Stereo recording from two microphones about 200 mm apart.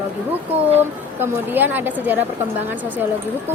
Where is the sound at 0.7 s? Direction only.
10° right (ahead or behind).